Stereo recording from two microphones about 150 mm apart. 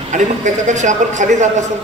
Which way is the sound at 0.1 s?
55° right (ahead or behind).